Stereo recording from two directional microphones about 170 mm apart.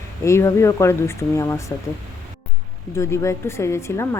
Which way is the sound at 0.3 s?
15° left (ahead or behind).